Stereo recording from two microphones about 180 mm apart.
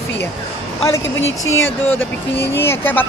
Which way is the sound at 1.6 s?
10° left (ahead or behind).